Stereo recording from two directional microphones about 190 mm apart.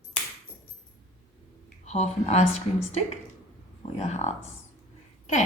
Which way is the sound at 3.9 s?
35° left (ahead or behind).